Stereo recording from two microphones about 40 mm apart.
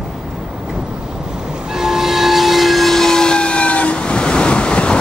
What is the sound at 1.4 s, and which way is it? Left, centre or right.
Train, centre.